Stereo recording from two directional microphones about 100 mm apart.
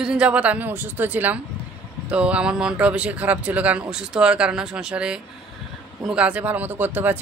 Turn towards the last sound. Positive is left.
turn(degrees=-20)  # may be behind; listen again after turning